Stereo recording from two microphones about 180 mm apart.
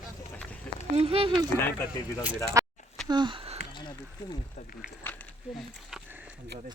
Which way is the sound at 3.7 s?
25° left (ahead or behind).